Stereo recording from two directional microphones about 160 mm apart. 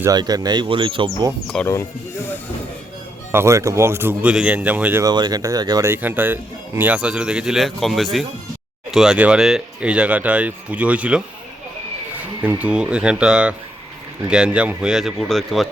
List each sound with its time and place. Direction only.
0.0 s speech: 25° right (ahead or behind)
1.6 s speech: 15° left (ahead or behind)
3.3 s speech: 20° right (ahead or behind)
5.0 s speech: 25° right (ahead or behind); by 11.2 s 10° right (ahead or behind)
12.4 s speech: 10° right (ahead or behind)